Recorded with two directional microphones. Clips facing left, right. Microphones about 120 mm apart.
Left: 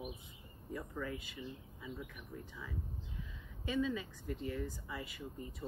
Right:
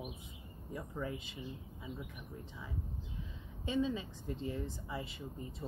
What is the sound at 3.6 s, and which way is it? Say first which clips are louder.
Speech: right 1 dB; 25° right (ahead or behind).